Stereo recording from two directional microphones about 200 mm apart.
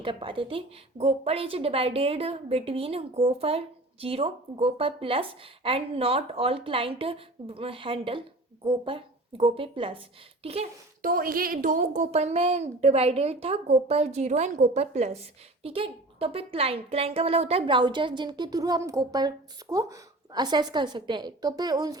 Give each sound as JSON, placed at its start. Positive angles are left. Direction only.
{"t": 0.0, "sound": "a woman's voice", "side_deg": -25}
{"t": 11.0, "sound": "a woman's voice", "side_deg": -45}